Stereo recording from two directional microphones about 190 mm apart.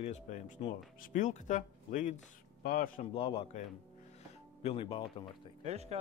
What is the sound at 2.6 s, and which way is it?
Speech, 50° left (ahead or behind).